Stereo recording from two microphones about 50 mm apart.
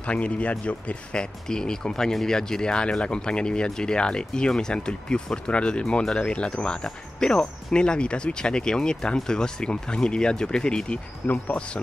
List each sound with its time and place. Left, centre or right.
0.0 s speech: left
11.2 s speech: left